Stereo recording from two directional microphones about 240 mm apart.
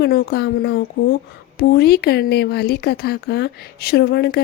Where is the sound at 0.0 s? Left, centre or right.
Left.